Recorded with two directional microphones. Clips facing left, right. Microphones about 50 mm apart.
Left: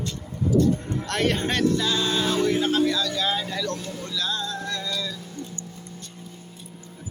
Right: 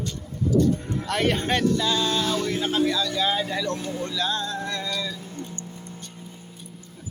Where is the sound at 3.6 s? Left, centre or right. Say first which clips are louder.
Right 2 dB; centre.